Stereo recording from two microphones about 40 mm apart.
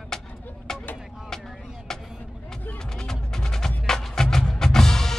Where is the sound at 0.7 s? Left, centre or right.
Centre.